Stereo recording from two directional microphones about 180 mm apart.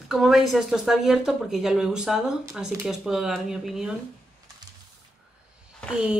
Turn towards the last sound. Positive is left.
turn(degrees=-5)  # may be behind; listen again after turning